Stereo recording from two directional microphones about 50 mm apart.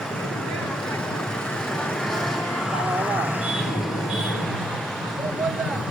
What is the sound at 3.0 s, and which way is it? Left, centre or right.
Vehicle, right.